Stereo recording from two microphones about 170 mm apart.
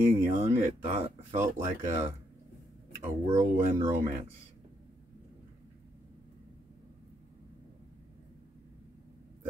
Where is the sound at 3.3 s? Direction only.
45° right (ahead or behind).